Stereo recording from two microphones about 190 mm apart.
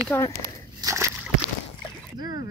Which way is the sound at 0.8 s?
15° right (ahead or behind).